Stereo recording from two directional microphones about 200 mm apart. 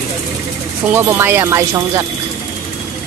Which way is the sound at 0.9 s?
10° right (ahead or behind).